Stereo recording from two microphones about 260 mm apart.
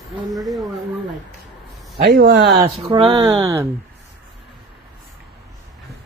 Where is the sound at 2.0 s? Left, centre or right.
Right.